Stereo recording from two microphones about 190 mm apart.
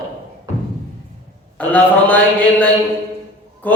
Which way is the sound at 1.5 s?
5° left (ahead or behind).